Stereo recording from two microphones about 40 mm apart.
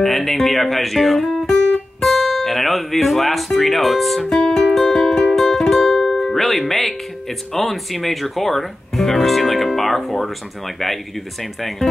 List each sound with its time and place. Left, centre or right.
0.0 s speech: centre
1.4 s music: centre
2.0 s speech: centre
4.3 s music: left
5.3 s music: centre
6.7 s speech: centre